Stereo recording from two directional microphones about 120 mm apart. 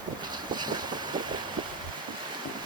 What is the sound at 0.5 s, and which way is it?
Boat, 35° right (ahead or behind).